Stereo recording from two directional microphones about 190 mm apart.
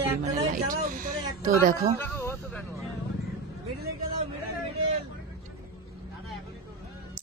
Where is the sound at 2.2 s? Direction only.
15° left (ahead or behind).